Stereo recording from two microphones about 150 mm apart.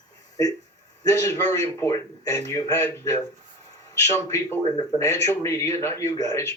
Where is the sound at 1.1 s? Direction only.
15° left (ahead or behind).